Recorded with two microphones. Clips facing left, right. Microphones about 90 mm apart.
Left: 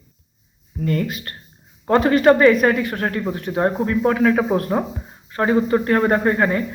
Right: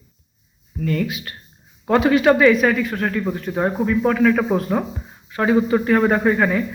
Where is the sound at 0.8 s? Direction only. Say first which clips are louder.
Even; 35° left (ahead or behind).